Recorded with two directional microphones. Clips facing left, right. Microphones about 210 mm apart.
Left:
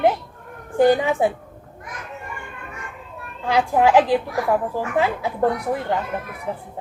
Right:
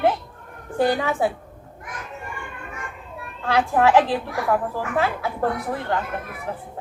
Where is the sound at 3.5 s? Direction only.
15° left (ahead or behind).